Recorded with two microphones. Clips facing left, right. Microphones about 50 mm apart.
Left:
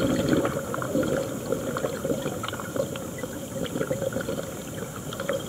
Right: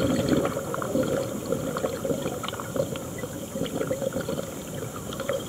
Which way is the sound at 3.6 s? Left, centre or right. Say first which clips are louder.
Even; centre.